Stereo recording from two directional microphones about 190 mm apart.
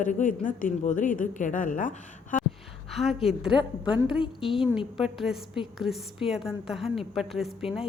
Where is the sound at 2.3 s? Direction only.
45° left (ahead or behind).